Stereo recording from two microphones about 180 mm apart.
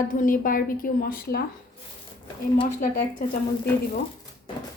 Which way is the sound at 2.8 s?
50° left (ahead or behind).